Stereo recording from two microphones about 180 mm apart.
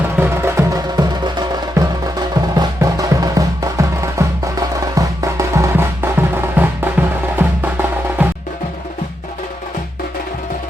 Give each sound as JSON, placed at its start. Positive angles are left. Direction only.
{"t": 0.2, "sound": "music", "side_deg": -15}